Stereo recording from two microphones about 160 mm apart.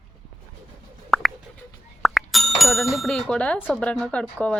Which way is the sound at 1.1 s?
Centre (ahead or behind).